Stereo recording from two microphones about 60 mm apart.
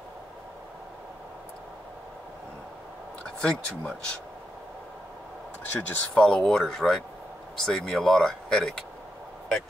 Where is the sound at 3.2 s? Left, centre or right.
Centre.